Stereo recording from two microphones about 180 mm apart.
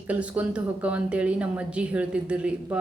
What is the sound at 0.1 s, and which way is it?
A man's voice, 10° right (ahead or behind).